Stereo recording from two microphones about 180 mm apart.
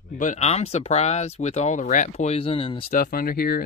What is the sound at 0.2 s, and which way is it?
Speech, 40° left (ahead or behind).